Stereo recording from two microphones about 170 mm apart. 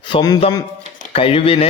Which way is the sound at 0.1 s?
25° left (ahead or behind).